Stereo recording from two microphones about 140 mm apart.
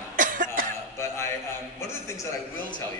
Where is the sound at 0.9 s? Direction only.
20° left (ahead or behind).